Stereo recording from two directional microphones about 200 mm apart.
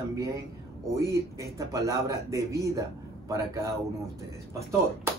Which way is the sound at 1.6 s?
15° right (ahead or behind).